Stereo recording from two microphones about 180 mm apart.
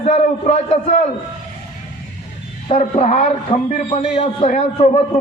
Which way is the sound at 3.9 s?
30° left (ahead or behind).